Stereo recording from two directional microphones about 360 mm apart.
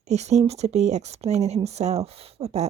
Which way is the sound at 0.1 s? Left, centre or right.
Centre.